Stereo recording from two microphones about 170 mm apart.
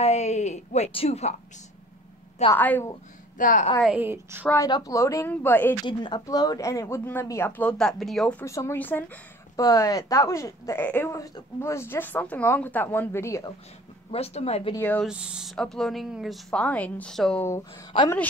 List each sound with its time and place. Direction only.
0.0 s speech: 40° left (ahead or behind)
2.5 s speech: 10° left (ahead or behind)
3.3 s a woman's voice: 50° left (ahead or behind)
3.8 s a woman's voice: 10° right (ahead or behind)
4.6 s speech: 20° left (ahead or behind)
5.9 s speech: 25° left (ahead or behind); by 8.5 s 5° left (ahead or behind)
8.5 s speech: 15° left (ahead or behind)
9.6 s speech: 20° left (ahead or behind)
14.1 s speech: 35° left (ahead or behind)
14.8 s speech: 10° left (ahead or behind)
15.0 s speech: 5° right (ahead or behind)
17.5 s speech: 25° left (ahead or behind)